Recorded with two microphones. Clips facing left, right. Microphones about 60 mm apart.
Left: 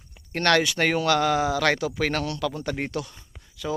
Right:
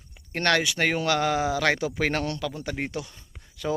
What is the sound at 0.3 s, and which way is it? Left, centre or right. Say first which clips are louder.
Speech: left 2 dB; centre.